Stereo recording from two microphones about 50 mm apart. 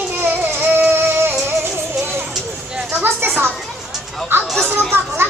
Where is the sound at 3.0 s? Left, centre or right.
Right.